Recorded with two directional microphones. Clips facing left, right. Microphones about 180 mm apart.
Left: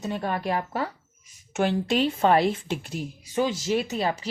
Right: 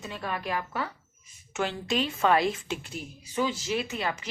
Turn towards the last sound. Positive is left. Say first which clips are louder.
# left 5 dB
turn(degrees=35)  # may be behind; listen again after turning